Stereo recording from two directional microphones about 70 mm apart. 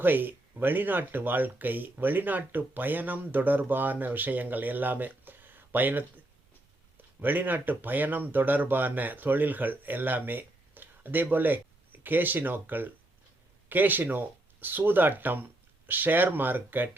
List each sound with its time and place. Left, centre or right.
0.0 s speech: right